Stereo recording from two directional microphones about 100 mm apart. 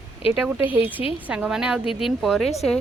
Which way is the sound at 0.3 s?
10° right (ahead or behind).